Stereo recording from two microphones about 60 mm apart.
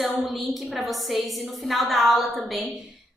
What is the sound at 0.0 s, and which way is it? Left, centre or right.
A woman's voice, centre.